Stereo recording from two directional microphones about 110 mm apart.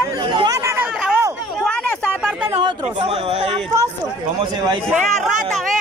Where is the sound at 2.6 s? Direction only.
50° right (ahead or behind); by 3.5 s 65° right (ahead or behind).